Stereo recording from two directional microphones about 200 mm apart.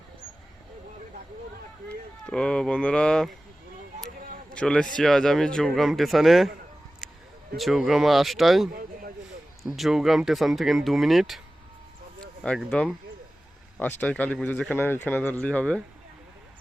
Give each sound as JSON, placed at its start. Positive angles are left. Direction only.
{"t": 2.2, "sound": "speech", "side_deg": 5}
{"t": 4.5, "sound": "speech", "side_deg": 5}
{"t": 7.5, "sound": "speech", "side_deg": 0}
{"t": 8.7, "sound": "a sound", "side_deg": -45}
{"t": 9.6, "sound": "speech", "side_deg": 0}
{"t": 12.4, "sound": "speech", "side_deg": 5}
{"t": 14.0, "sound": "speech", "side_deg": 5}